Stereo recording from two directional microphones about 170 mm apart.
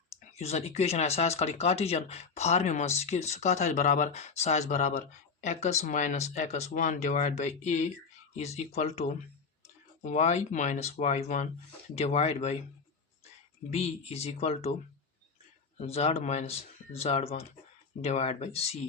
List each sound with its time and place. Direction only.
0.2 s speech: 40° left (ahead or behind)
13.7 s speech: 40° left (ahead or behind)
15.8 s speech: 35° left (ahead or behind)